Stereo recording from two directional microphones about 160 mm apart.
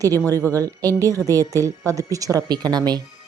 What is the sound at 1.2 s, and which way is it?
Speech, 15° left (ahead or behind).